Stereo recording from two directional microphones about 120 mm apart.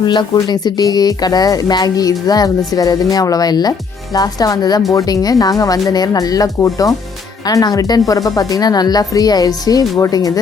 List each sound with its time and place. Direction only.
0.0 s speech: 40° left (ahead or behind)